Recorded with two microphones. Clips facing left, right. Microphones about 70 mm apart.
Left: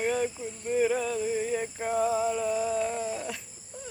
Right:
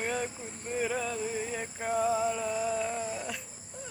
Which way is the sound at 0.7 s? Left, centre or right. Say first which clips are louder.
Left 6 dB; centre.